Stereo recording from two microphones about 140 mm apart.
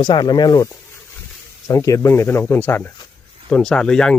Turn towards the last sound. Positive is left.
turn(degrees=5)  # may be behind; listen again after turning